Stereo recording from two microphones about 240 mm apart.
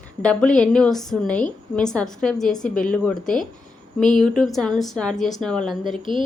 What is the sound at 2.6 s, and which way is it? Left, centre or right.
Speech, left.